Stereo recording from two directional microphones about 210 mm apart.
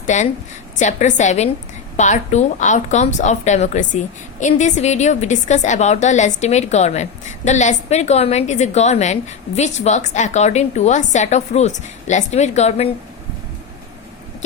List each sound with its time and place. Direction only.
0.0 s a woman's voice: 35° left (ahead or behind)